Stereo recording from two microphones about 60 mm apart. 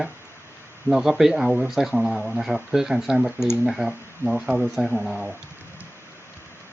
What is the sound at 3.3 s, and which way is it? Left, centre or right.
Speech, left.